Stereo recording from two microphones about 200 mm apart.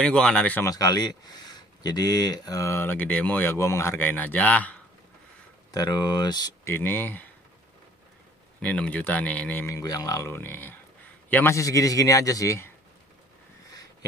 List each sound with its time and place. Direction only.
0.0 s speech: 5° left (ahead or behind)
5.7 s speech: 20° left (ahead or behind)
8.5 s speech: 5° left (ahead or behind)